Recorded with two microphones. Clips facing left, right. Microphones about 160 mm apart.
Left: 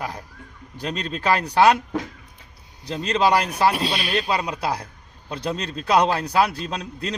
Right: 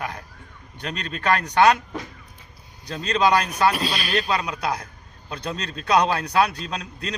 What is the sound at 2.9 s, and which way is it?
Speech, 30° left (ahead or behind).